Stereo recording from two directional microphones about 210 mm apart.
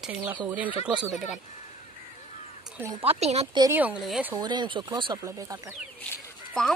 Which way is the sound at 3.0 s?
30° right (ahead or behind).